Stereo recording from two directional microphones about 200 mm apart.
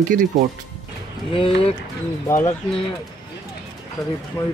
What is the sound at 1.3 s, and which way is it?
Speech, 30° left (ahead or behind).